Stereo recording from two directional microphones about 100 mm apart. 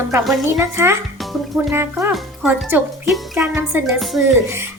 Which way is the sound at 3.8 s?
Centre (ahead or behind).